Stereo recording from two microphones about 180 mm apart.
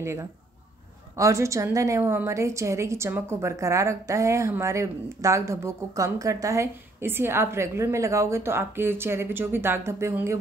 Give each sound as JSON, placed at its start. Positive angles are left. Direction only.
{"t": 0.0, "sound": "a woman's voice", "side_deg": -15}